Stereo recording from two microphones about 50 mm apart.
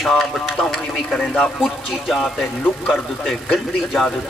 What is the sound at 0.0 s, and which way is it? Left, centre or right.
Speech, centre.